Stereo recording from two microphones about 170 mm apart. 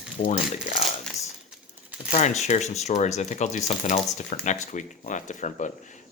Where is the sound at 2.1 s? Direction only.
40° left (ahead or behind).